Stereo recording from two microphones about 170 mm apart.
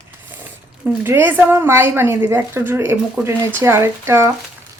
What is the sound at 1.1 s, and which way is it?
Speech, 10° right (ahead or behind).